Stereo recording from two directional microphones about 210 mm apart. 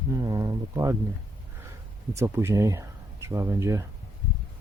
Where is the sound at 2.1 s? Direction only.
15° right (ahead or behind).